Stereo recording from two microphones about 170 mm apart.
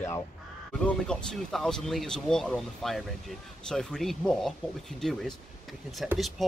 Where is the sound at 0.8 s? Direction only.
5° left (ahead or behind).